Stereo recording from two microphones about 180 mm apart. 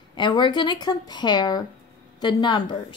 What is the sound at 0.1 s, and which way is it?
Speech, 25° left (ahead or behind).